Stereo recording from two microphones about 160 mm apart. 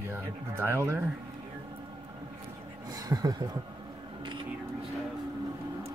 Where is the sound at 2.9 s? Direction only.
25° right (ahead or behind).